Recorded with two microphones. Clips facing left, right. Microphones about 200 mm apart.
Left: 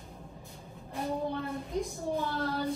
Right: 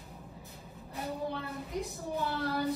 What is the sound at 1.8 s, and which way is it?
Speech, 15° left (ahead or behind).